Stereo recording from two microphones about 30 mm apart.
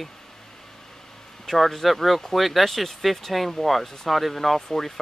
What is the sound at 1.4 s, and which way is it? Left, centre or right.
Speech, centre.